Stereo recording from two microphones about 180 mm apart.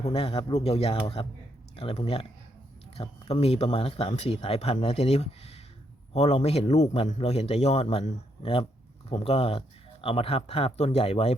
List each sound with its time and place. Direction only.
0.0 s speech: 30° left (ahead or behind)